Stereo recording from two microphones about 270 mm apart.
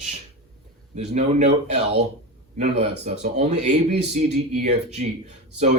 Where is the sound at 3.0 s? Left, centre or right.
Right.